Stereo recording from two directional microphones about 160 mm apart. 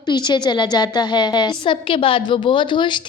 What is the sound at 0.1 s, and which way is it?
A woman's voice, 25° left (ahead or behind).